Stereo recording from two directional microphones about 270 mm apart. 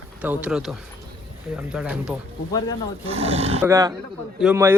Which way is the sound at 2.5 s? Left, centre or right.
Centre.